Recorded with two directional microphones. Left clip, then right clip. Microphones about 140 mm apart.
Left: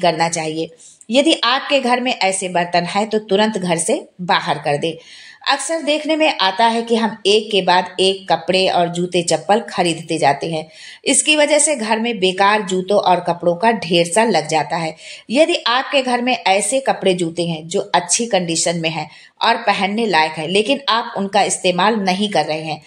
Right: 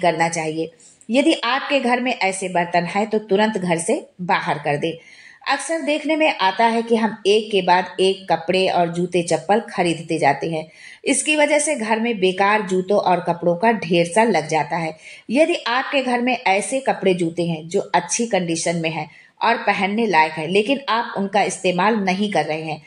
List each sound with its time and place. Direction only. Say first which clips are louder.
0.0 s a woman's voice: left 2 dB; 30° left (ahead or behind)